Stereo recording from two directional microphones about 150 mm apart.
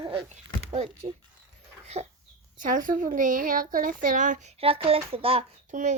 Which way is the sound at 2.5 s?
65° right (ahead or behind).